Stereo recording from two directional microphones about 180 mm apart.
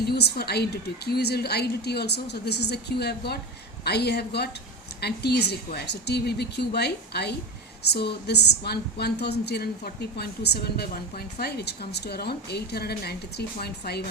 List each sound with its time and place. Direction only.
0.1 s a woman's voice: 65° left (ahead or behind)